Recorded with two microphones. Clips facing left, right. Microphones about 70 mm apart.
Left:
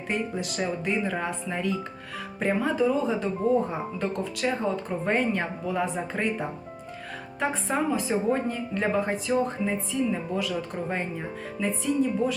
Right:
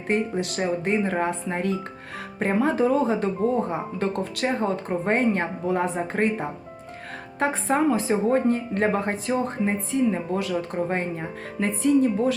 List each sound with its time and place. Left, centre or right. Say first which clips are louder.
0.5 s speech: right 4 dB; right
7.3 s speech: right 4 dB; right